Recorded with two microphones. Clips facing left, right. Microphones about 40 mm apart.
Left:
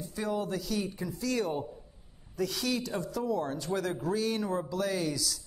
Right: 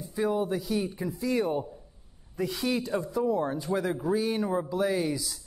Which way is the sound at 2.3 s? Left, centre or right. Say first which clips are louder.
Right 2 dB; right.